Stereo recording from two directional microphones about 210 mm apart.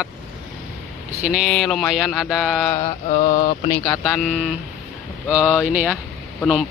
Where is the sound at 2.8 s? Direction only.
30° left (ahead or behind).